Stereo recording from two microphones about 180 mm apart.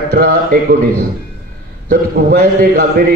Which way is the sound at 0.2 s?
50° right (ahead or behind).